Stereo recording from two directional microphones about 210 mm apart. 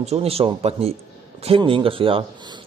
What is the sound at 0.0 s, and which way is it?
Speech, 30° right (ahead or behind).